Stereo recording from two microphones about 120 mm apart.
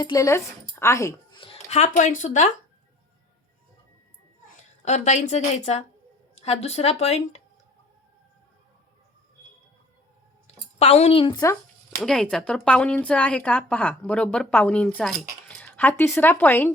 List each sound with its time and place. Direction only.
0.0 s a woman's voice: 30° left (ahead or behind)
1.3 s a sound: 45° left (ahead or behind)
1.7 s speech: 80° left
4.9 s a woman's voice: 75° left (ahead or behind)
10.4 s a sound: 60° left (ahead or behind)
12.0 s a woman's voice: 5° left (ahead or behind)